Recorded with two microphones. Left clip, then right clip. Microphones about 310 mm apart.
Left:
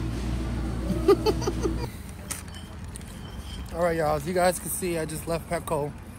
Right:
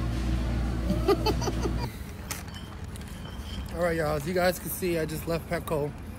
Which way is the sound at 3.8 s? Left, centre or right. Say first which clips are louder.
Left 3 dB; centre.